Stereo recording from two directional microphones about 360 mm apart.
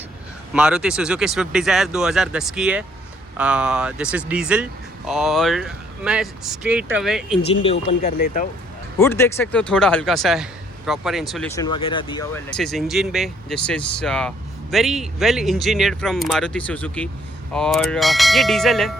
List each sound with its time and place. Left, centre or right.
0.5 s speech: centre
7.6 s speech: centre
9.0 s speech: centre